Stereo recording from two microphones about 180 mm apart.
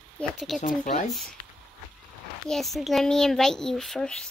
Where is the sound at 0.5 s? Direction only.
45° left (ahead or behind).